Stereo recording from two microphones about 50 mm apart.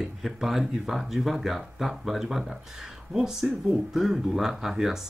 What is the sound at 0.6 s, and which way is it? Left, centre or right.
Speech, centre.